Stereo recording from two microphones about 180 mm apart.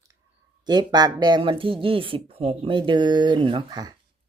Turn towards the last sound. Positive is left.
turn(degrees=-20)  # may be behind; listen again after turning